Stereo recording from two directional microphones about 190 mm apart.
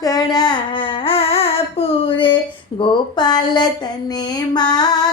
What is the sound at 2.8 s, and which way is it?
Child singing, 25° left (ahead or behind).